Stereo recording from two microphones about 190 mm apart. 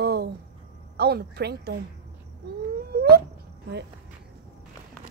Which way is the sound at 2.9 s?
55° right (ahead or behind).